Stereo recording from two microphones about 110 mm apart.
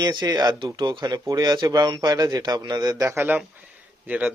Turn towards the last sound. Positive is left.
turn(degrees=-15)  # may be behind; listen again after turning